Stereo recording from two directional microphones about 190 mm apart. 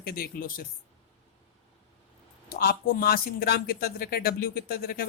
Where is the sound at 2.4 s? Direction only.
55° left (ahead or behind).